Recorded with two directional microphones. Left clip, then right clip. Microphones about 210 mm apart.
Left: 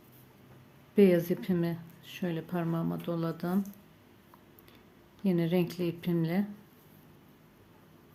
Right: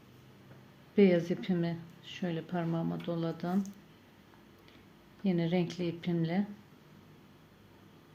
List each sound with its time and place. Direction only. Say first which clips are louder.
0.9 s a woman's voice: left 2 dB; 10° left (ahead or behind)
5.2 s a woman's voice: left 3 dB; 10° left (ahead or behind)